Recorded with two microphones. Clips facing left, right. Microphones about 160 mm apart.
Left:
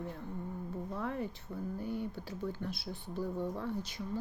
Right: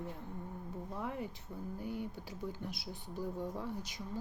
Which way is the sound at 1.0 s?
15° right (ahead or behind).